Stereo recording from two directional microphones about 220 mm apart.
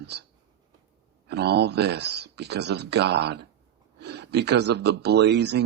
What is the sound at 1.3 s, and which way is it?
Speech, 50° right (ahead or behind).